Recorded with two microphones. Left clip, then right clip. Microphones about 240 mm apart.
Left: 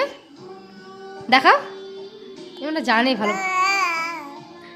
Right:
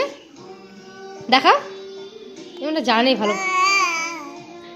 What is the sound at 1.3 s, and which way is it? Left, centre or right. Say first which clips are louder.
Speech: even; centre.